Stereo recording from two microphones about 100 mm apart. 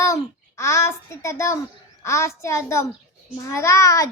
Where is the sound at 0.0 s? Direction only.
30° left (ahead or behind).